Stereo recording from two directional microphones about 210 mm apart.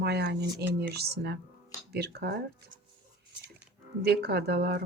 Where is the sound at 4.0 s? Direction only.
50° right (ahead or behind).